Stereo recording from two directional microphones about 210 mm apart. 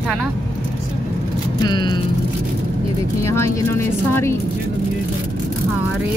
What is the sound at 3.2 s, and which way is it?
Speech, 15° left (ahead or behind).